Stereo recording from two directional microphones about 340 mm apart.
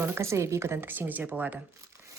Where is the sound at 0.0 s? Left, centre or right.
Centre.